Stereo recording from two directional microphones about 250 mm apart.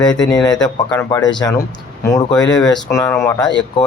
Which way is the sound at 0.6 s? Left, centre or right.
Centre.